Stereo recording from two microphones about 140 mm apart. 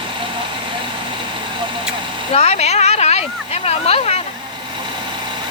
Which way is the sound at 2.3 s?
50° left (ahead or behind).